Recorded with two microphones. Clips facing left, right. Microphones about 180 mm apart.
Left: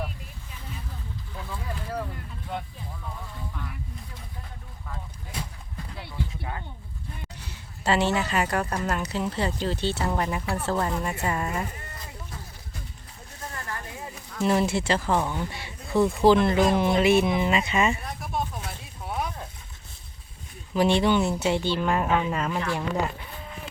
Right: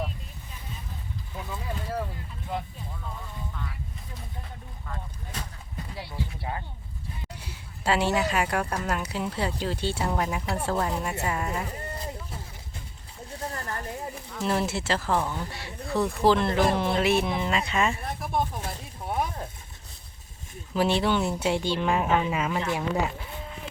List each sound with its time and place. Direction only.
2.5 s speech: 5° right (ahead or behind)
4.9 s vehicle: 10° left (ahead or behind)
7.4 s speech: 10° right (ahead or behind)
11.9 s a sound: 30° right (ahead or behind)
14.3 s speech: centre (ahead or behind)
18.0 s a sound: 55° right (ahead or behind)
20.7 s speech: 5° right (ahead or behind)